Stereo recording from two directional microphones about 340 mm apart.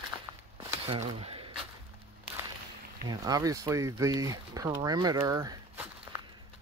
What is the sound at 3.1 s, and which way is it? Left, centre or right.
Speech, centre.